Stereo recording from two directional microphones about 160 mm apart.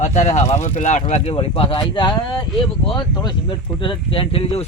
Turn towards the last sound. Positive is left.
turn(degrees=35)  # may be behind; listen again after turning